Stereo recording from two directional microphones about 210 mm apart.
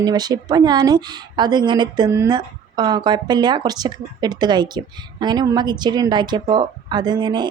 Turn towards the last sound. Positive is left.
turn(degrees=-20)  # may be behind; listen again after turning